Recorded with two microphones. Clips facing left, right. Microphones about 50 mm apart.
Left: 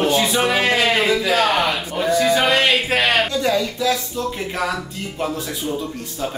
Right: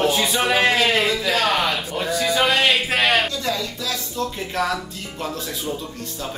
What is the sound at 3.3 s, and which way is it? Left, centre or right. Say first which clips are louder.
Speech: left 6 dB; left.